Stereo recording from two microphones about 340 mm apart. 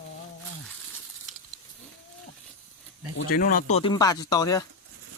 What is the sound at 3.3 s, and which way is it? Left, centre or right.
Speech, left.